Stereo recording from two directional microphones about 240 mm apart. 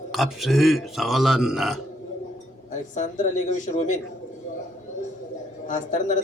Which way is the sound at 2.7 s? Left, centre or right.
Left.